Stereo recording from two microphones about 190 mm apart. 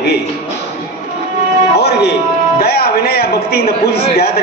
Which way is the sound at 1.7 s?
60° left (ahead or behind).